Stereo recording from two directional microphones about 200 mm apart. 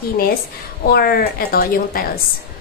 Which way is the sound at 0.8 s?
50° left (ahead or behind).